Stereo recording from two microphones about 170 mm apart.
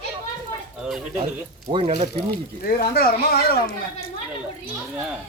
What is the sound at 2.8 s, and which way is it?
Speech, 65° left (ahead or behind).